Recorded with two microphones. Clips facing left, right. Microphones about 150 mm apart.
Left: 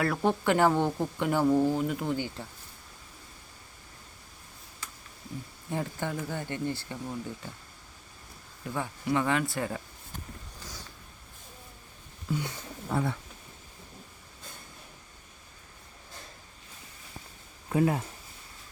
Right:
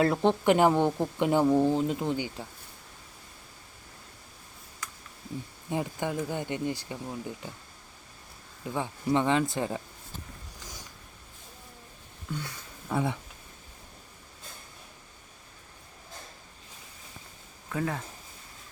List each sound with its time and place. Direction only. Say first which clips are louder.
0.0 s speech: right 3 dB; 25° right (ahead or behind)
5.7 s speech: right 2 dB; 15° right (ahead or behind)
8.6 s speech: right 2 dB; 20° right (ahead or behind)
12.3 s speech: left 4 dB; 5° left (ahead or behind)
17.7 s speech: left 6 dB; 20° left (ahead or behind)